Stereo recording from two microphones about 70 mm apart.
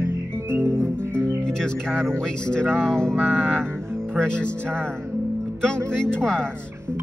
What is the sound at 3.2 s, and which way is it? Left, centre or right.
Music, right.